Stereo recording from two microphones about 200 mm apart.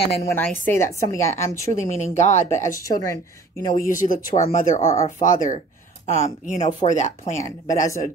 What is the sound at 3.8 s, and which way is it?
Speech, 40° left (ahead or behind).